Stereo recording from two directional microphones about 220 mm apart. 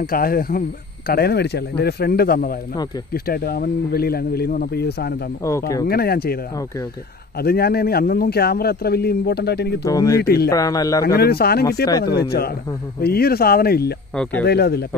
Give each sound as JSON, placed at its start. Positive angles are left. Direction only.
{"t": 0.0, "sound": "speech", "side_deg": 40}
{"t": 5.4, "sound": "a man's voice", "side_deg": 15}
{"t": 5.9, "sound": "speech", "side_deg": 45}
{"t": 7.3, "sound": "speech", "side_deg": 45}
{"t": 9.8, "sound": "a man's voice", "side_deg": 15}
{"t": 10.1, "sound": "speech", "side_deg": 45}
{"t": 10.5, "sound": "a man's voice", "side_deg": 15}
{"t": 11.1, "sound": "speech", "side_deg": 45}
{"t": 14.1, "sound": "speech", "side_deg": 5}
{"t": 14.4, "sound": "speech", "side_deg": 45}